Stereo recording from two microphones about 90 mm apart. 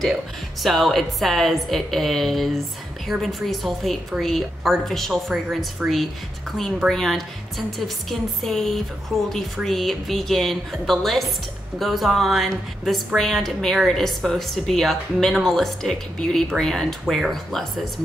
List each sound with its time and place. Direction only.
0.0 s a woman's voice: centre (ahead or behind)
6.9 s a woman's voice: 5° left (ahead or behind)